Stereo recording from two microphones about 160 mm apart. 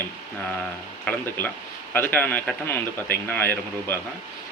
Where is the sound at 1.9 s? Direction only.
10° left (ahead or behind).